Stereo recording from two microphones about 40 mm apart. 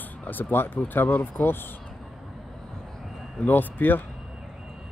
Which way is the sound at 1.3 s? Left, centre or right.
Left.